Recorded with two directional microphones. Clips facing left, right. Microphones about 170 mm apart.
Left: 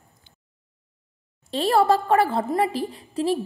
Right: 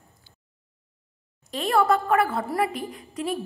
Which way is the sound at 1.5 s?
30° left (ahead or behind).